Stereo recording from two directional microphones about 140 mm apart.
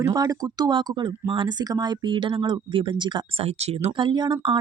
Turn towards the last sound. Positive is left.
turn(degrees=-35)  # may be behind; listen again after turning